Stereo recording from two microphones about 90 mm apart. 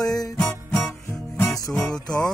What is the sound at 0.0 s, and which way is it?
Music, 45° left (ahead or behind).